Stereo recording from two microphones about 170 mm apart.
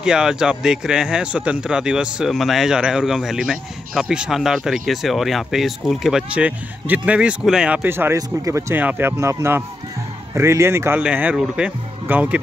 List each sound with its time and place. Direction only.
0.0 s speech: 5° right (ahead or behind)